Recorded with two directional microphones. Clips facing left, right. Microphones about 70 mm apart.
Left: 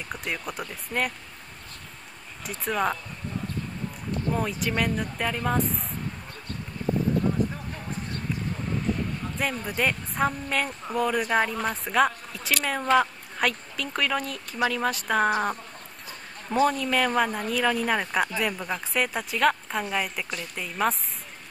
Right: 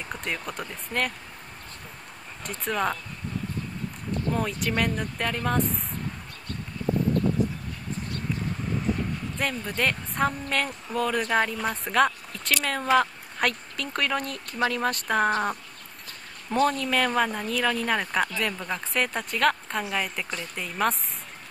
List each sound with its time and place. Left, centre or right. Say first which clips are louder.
0.1 s speech: even; centre
2.4 s speech: left 1 dB; centre
4.3 s speech: even; centre
7.4 s a sound: even; left
9.4 s speech: left 1 dB; centre
16.4 s speech: left 1 dB; centre